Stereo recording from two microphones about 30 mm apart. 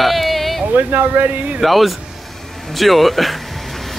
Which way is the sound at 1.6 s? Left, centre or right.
Centre.